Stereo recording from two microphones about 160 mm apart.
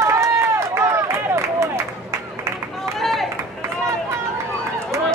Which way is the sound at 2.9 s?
Centre (ahead or behind).